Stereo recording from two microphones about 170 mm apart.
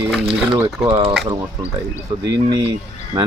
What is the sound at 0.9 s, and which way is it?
Speech, 30° right (ahead or behind).